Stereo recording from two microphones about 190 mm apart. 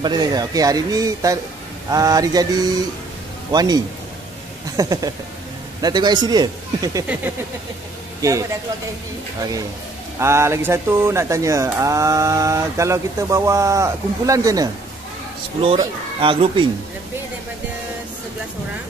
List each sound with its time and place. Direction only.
0.0 s speech: 20° right (ahead or behind)
8.2 s speech: 15° right (ahead or behind)
10.1 s speech: 15° right (ahead or behind)
15.6 s speech: 30° right (ahead or behind)